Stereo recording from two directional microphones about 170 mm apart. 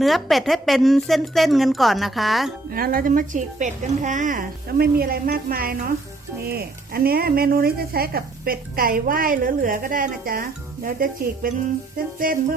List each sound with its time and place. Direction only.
0.0 s a woman's voice: centre (ahead or behind)
2.6 s speech: 60° right (ahead or behind)